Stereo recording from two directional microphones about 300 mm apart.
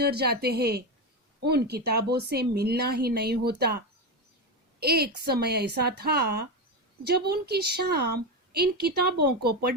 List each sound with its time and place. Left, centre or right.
0.0 s speech: right